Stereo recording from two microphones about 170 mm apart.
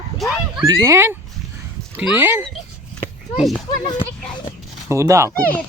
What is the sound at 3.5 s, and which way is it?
Speech, 25° left (ahead or behind).